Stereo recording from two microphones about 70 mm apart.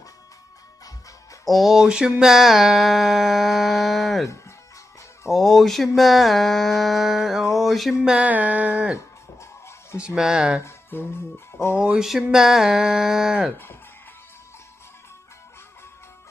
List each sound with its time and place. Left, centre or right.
1.4 s music: centre
5.3 s music: centre
8.0 s speech: centre
8.3 s a sound: right
9.4 s music: left
9.9 s speech: centre
10.6 s speech: left
12.0 s speech: centre